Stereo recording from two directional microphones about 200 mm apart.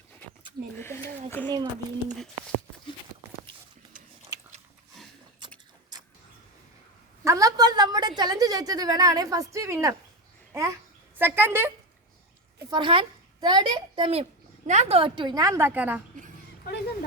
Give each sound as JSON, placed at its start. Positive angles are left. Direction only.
{"t": 0.8, "sound": "speech", "side_deg": 10}
{"t": 5.9, "sound": "vehicle", "side_deg": -20}
{"t": 7.3, "sound": "a sound", "side_deg": -15}
{"t": 10.5, "sound": "a child's voice", "side_deg": -15}
{"t": 12.7, "sound": "a child's voice", "side_deg": -25}